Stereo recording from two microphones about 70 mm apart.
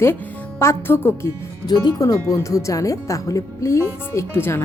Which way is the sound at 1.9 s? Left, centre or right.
Left.